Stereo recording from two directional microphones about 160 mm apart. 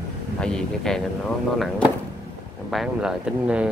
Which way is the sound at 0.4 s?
5° left (ahead or behind).